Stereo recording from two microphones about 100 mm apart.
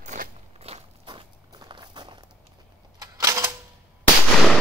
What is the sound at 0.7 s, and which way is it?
Walk, 80° right.